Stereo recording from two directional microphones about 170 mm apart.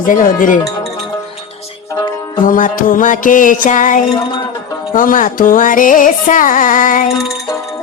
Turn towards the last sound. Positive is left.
turn(degrees=50)  # may be behind; listen again after turning